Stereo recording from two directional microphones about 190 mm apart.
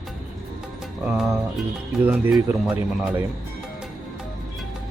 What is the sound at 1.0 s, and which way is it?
Music, 5° right (ahead or behind).